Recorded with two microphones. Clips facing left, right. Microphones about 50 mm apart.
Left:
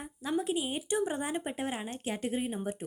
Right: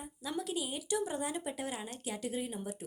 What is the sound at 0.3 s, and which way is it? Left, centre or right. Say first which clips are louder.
Speech: left 6 dB; left.